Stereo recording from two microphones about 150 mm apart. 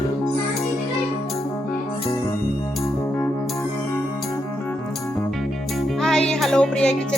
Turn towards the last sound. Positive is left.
turn(degrees=5)  # may be behind; listen again after turning